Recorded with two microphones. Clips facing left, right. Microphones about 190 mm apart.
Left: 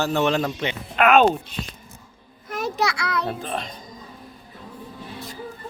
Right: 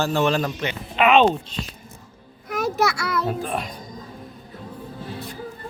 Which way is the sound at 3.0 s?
5° right (ahead or behind).